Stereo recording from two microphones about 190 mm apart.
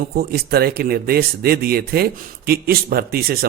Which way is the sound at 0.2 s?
55° right (ahead or behind).